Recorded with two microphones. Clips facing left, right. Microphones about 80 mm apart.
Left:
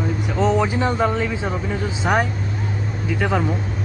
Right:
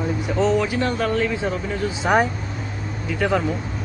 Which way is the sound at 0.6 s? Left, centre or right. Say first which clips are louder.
Left 2 dB; left.